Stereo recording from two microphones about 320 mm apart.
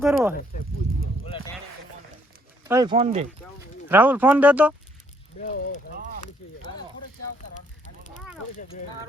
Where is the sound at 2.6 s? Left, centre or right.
Centre.